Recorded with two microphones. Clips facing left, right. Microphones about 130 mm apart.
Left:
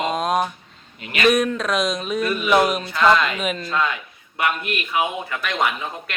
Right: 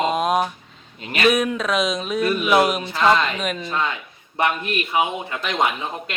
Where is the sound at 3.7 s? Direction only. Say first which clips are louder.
Left 1 dB; 20° right (ahead or behind).